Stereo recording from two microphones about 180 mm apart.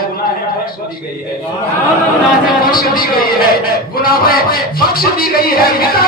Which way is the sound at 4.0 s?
55° left (ahead or behind).